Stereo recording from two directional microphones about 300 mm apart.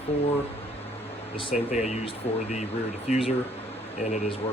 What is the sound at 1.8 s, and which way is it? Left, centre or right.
Speech, left.